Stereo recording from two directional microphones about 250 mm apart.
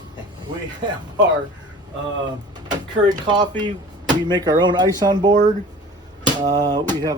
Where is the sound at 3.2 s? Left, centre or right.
Centre.